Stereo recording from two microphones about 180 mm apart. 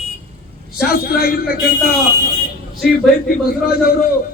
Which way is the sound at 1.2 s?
55° left (ahead or behind).